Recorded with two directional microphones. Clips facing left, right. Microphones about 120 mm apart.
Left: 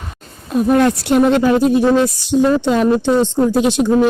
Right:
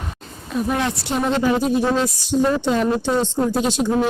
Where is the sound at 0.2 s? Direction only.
50° left (ahead or behind).